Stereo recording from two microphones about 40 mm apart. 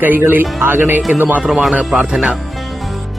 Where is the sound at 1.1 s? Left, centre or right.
Right.